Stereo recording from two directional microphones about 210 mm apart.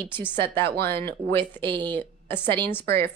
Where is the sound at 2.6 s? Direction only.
10° left (ahead or behind).